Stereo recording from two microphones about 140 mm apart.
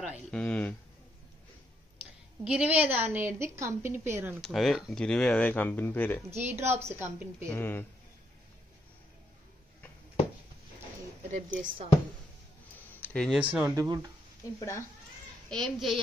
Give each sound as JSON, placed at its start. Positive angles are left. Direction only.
{"t": 0.3, "sound": "speech", "side_deg": 10}
{"t": 2.4, "sound": "a woman's voice", "side_deg": -10}
{"t": 4.4, "sound": "speech", "side_deg": 0}
{"t": 6.3, "sound": "a woman's voice", "side_deg": -15}
{"t": 7.5, "sound": "speech", "side_deg": 15}
{"t": 11.3, "sound": "speech", "side_deg": -55}
{"t": 13.0, "sound": "a sound", "side_deg": 10}
{"t": 13.3, "sound": "a woman's voice", "side_deg": -10}
{"t": 13.7, "sound": "speech", "side_deg": -25}
{"t": 14.6, "sound": "speech", "side_deg": 20}
{"t": 15.5, "sound": "a child's voice", "side_deg": 0}